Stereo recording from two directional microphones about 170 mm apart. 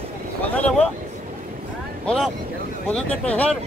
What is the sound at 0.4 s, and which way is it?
Speech, 10° left (ahead or behind).